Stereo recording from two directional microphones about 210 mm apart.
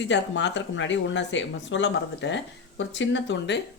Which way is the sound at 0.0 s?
55° left (ahead or behind).